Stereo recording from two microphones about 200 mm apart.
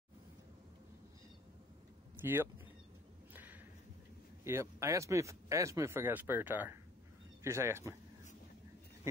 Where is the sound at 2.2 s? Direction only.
10° right (ahead or behind).